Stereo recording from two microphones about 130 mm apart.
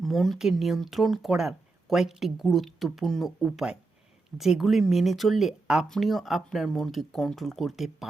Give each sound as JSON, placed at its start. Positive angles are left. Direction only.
{"t": 0.0, "sound": "speech", "side_deg": 0}